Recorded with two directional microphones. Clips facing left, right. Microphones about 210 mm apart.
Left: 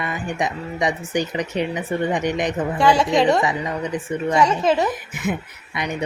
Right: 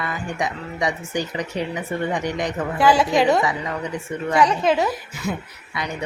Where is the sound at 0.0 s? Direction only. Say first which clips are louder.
Left 2 dB; 20° left (ahead or behind).